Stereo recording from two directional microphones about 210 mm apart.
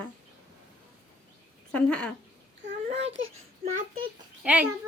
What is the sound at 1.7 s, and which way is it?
Speech, 5° left (ahead or behind).